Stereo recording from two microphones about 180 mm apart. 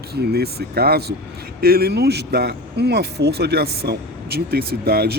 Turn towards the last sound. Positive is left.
turn(degrees=-60)  # may be behind; listen again after turning